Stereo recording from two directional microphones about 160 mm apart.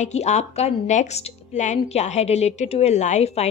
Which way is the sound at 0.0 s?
45° left (ahead or behind).